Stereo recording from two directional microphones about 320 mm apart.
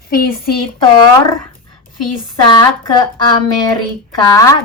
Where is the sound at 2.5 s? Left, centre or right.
Centre.